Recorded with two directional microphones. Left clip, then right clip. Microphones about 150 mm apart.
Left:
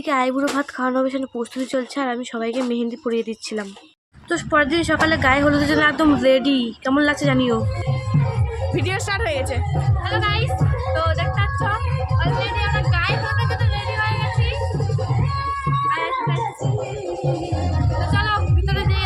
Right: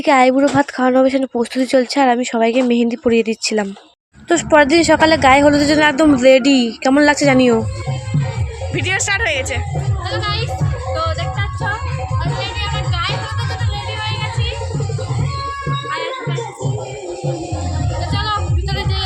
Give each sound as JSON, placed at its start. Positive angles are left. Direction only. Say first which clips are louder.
{"t": 0.0, "sound": "a woman's voice", "louder": "right 8 dB", "side_deg": -30}
{"t": 8.7, "sound": "speech", "louder": "right 7 dB", "side_deg": 5}
{"t": 10.9, "sound": "music", "louder": "right 1 dB", "side_deg": 0}
{"t": 18.1, "sound": "music", "louder": "right 1 dB", "side_deg": 0}